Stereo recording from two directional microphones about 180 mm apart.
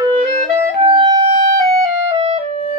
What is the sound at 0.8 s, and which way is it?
Music, 25° right (ahead or behind).